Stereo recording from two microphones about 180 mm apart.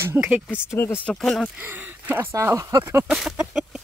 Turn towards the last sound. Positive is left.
turn(degrees=-5)  # may be behind; listen again after turning